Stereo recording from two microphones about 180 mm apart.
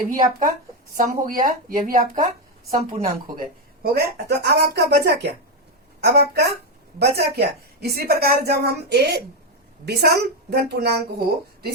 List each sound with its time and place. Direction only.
0.0 s speech: 50° right (ahead or behind)
3.9 s a woman's voice: 60° right (ahead or behind)